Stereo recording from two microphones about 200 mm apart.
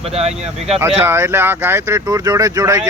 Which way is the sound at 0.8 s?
10° right (ahead or behind).